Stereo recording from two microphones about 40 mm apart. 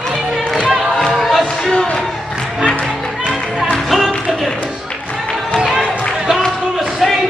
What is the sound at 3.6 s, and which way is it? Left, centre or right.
Music, centre.